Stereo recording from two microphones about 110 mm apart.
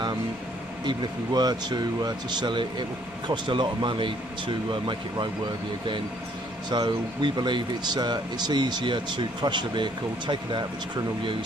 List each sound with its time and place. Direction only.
0.8 s speech: 40° right (ahead or behind)
6.7 s speech: 45° right (ahead or behind)